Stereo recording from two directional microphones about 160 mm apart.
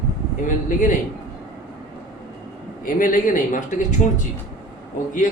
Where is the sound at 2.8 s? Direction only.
55° left (ahead or behind).